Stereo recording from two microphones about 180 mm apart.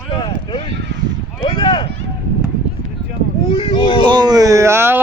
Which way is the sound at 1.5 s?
25° left (ahead or behind).